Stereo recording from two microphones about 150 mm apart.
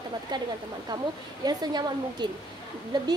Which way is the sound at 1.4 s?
30° right (ahead or behind).